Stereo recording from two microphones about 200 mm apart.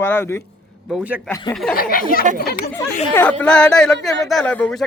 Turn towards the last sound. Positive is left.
turn(degrees=5)  # may be behind; listen again after turning